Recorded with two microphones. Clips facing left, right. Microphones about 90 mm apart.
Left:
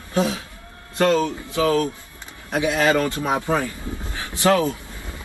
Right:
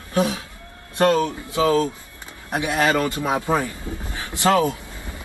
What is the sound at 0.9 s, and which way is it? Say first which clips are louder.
Speech: right 1 dB; 20° right (ahead or behind).